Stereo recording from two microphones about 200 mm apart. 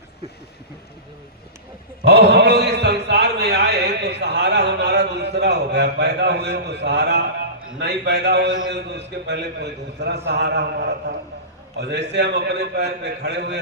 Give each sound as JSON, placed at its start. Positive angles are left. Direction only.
{"t": 2.0, "sound": "a man's voice", "side_deg": -55}